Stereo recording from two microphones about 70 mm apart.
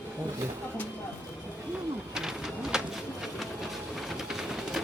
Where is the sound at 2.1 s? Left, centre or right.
Centre.